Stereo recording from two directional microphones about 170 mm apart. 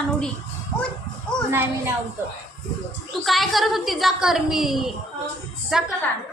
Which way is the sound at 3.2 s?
Centre (ahead or behind).